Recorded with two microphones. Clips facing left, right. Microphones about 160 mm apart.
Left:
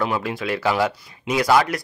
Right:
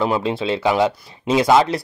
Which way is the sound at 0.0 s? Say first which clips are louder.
Right 4 dB; 25° right (ahead or behind).